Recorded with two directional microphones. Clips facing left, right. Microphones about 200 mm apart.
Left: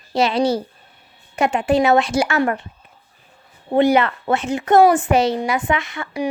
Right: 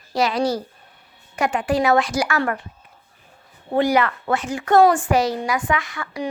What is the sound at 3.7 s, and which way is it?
A woman's voice, 25° left (ahead or behind).